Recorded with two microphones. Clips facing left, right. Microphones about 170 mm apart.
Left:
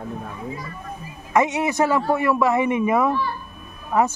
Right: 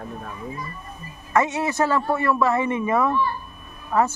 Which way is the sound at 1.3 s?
15° left (ahead or behind).